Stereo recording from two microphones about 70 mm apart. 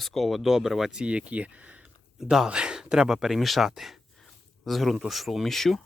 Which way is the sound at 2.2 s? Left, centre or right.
Centre.